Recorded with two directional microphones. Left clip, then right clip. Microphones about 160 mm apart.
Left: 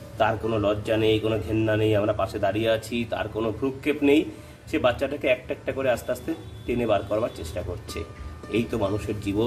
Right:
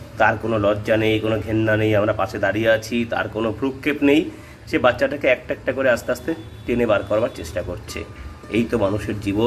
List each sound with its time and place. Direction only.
0.2 s a man's voice: 5° right (ahead or behind)